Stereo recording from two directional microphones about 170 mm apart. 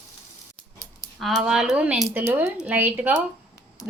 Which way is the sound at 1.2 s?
Centre (ahead or behind).